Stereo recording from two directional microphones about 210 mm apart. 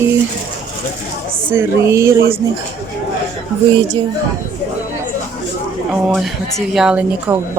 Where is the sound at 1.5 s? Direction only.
10° right (ahead or behind).